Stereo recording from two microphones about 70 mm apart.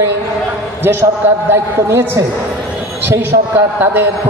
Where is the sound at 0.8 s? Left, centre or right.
Right.